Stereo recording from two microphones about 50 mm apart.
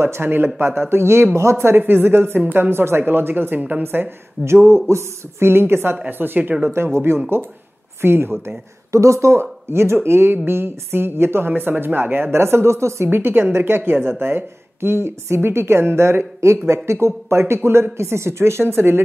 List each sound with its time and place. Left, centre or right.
0.0 s a woman's voice: right
1.8 s a woman's voice: right
2.4 s a woman's voice: right
2.7 s speech: right
3.0 s a woman's voice: right
4.5 s a woman's voice: right
6.0 s a woman's voice: right
6.7 s a woman's voice: right
8.9 s a woman's voice: right
13.1 s a woman's voice: right